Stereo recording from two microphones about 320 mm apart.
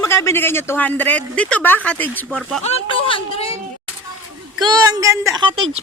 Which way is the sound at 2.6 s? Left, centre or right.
Centre.